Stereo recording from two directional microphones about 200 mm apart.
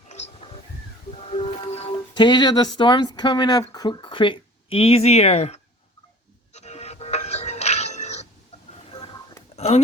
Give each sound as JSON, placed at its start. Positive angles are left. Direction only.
{"t": 1.2, "sound": "music", "side_deg": 30}
{"t": 3.7, "sound": "speech", "side_deg": 20}
{"t": 6.5, "sound": "music", "side_deg": 35}
{"t": 9.6, "sound": "speech", "side_deg": 30}